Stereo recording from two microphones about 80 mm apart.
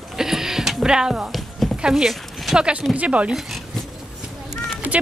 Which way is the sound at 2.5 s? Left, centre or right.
Centre.